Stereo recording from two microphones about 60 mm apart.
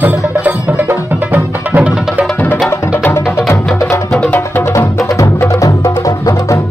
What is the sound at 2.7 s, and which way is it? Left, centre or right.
Music, left.